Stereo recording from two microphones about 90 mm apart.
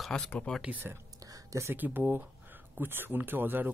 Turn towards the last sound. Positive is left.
turn(degrees=-20)  # may be behind; listen again after turning